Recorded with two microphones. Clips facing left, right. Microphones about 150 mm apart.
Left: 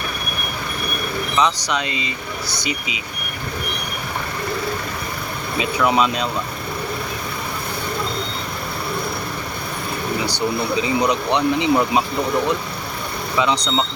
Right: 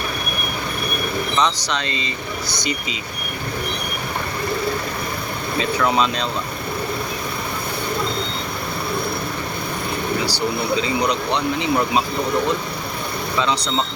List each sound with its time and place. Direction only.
1.4 s speech: 10° left (ahead or behind)
5.5 s speech: 10° left (ahead or behind)
10.2 s speech: 20° left (ahead or behind)